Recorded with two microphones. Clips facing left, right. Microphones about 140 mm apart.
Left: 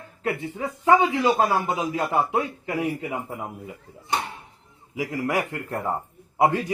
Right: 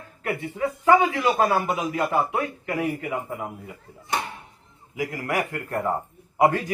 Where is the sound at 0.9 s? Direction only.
25° left (ahead or behind).